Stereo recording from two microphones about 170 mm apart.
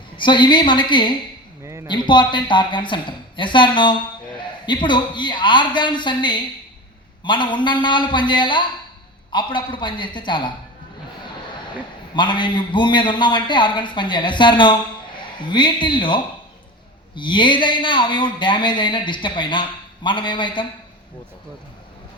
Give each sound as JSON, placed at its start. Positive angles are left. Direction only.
{"t": 0.2, "sound": "speech", "side_deg": 25}
{"t": 1.6, "sound": "a sound", "side_deg": -15}
{"t": 1.9, "sound": "speech", "side_deg": 25}
{"t": 12.1, "sound": "speech", "side_deg": 25}